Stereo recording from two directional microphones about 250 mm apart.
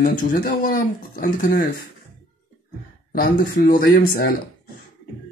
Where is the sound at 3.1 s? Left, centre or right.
Left.